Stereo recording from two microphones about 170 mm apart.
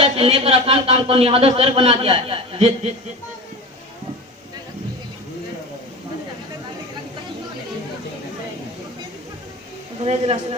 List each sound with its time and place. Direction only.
0.0 s speech: 35° right (ahead or behind)
10.0 s speech: 40° right (ahead or behind)